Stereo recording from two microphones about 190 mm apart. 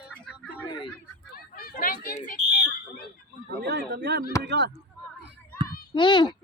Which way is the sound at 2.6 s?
55° left (ahead or behind).